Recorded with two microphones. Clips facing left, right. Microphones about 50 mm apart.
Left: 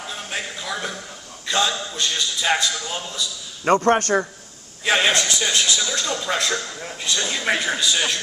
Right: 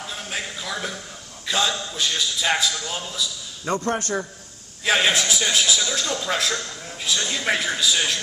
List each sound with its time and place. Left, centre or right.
0.0 s a sound: centre
1.5 s a man's voice: centre
3.6 s a man's voice: left
4.8 s a man's voice: centre
7.2 s a man's voice: centre